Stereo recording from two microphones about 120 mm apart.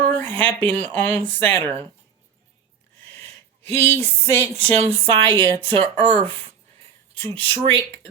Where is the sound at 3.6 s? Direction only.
60° right (ahead or behind).